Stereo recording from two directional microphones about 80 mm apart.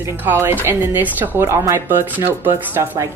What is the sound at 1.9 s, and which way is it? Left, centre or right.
Speech, right.